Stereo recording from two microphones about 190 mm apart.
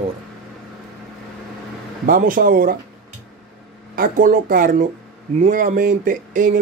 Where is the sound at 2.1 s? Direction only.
50° right (ahead or behind).